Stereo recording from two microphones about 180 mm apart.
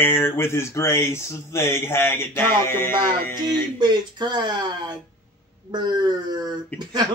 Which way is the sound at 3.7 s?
25° right (ahead or behind).